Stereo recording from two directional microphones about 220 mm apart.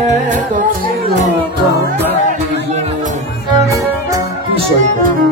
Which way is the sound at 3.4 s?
15° right (ahead or behind).